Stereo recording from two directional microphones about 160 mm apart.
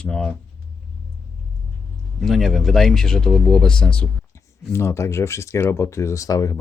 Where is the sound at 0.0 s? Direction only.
5° left (ahead or behind).